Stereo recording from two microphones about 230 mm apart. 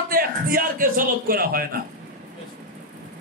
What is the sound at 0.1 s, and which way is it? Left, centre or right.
A man's voice, right.